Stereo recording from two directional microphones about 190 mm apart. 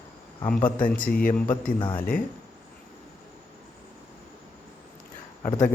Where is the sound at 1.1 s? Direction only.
45° left (ahead or behind).